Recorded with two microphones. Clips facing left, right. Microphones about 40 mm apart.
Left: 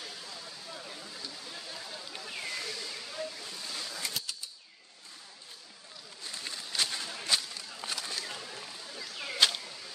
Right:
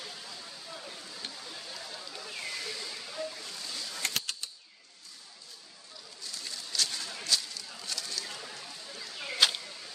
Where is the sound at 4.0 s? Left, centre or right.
Right.